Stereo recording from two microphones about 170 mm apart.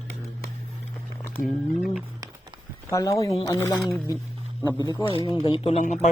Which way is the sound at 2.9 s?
20° left (ahead or behind).